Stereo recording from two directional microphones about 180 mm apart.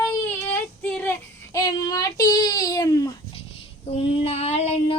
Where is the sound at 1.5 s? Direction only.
20° left (ahead or behind).